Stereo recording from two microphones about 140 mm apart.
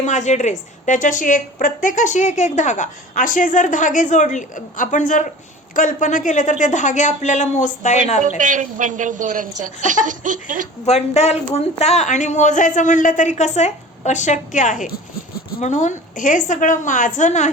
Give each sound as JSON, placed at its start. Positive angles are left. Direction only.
{"t": 0.0, "sound": "a woman's voice", "side_deg": 60}
{"t": 8.4, "sound": "speech", "side_deg": -65}
{"t": 10.8, "sound": "a woman's voice", "side_deg": 50}